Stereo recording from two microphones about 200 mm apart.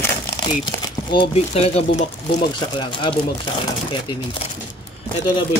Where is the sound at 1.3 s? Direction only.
30° left (ahead or behind).